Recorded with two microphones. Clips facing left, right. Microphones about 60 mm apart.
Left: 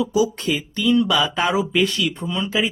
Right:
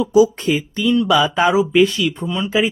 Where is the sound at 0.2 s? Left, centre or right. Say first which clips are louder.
Right 9 dB; right.